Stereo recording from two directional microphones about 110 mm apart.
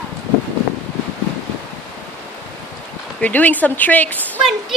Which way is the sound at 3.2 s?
15° left (ahead or behind).